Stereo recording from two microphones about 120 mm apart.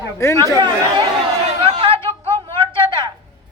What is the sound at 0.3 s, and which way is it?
Speech, 30° right (ahead or behind).